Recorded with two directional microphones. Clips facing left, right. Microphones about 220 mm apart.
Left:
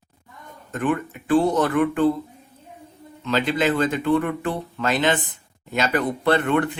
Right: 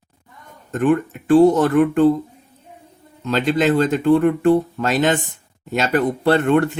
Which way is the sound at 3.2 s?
45° right (ahead or behind).